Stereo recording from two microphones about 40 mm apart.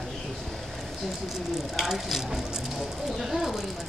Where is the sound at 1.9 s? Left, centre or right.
Centre.